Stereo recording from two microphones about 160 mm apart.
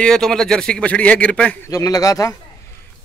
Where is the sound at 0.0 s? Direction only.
5° left (ahead or behind).